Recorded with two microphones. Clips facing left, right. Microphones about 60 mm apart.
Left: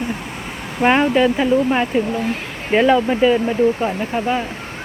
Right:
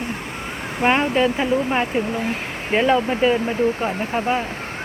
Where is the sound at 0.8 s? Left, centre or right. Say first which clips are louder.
Left 3 dB; centre.